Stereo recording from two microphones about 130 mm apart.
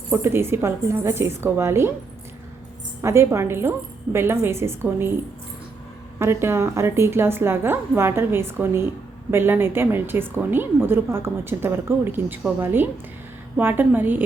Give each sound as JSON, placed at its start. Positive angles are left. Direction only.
{"t": 0.1, "sound": "a woman's voice", "side_deg": -20}
{"t": 3.0, "sound": "a woman's voice", "side_deg": -20}
{"t": 6.1, "sound": "a woman's voice", "side_deg": -20}